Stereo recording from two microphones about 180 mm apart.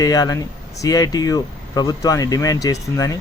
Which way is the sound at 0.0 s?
20° left (ahead or behind).